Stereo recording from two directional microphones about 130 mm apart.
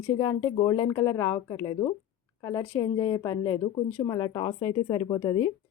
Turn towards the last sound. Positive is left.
turn(degrees=30)  # may be behind; listen again after turning